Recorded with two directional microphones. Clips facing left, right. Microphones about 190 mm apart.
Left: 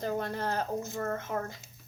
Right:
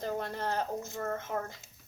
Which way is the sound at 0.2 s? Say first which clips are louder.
Left 1 dB; 20° right (ahead or behind).